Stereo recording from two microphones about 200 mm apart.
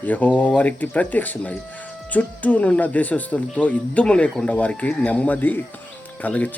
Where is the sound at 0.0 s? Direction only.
10° left (ahead or behind).